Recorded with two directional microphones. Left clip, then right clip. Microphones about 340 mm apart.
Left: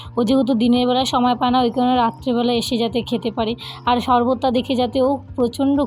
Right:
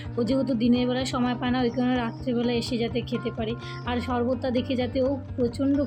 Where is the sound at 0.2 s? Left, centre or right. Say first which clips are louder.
Left 8 dB; centre.